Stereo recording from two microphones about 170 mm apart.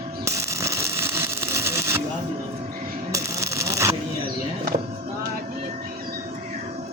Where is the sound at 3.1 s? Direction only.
15° right (ahead or behind).